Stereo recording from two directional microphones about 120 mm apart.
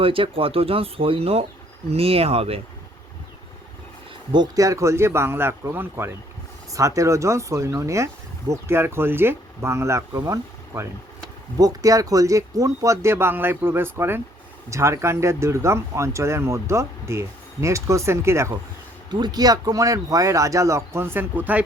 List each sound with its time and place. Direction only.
0.0 s speech: 50° right (ahead or behind)
4.3 s speech: 35° right (ahead or behind)
19.1 s speech: 35° right (ahead or behind); by 21.6 s 15° right (ahead or behind)